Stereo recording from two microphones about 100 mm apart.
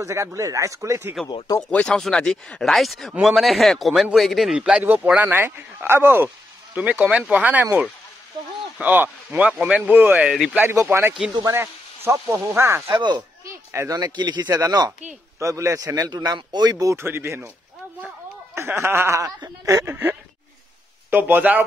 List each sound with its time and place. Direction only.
0.0 s a man's voice: 30° right (ahead or behind)
1.7 s speech: 10° left (ahead or behind); by 7.6 s 15° right (ahead or behind)
8.7 s speech: 15° right (ahead or behind)
12.9 s speech: 45° right (ahead or behind)
13.7 s a man's voice: 35° right (ahead or behind); by 21.6 s 15° right (ahead or behind)